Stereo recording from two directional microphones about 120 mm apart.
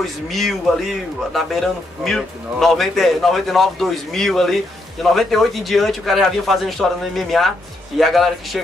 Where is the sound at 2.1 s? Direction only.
Centre (ahead or behind).